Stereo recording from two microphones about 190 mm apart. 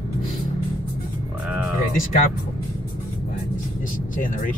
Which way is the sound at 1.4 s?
5° right (ahead or behind).